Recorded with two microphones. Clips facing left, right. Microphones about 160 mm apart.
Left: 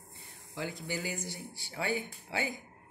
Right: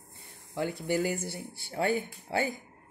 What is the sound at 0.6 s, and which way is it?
Speech, 55° right (ahead or behind).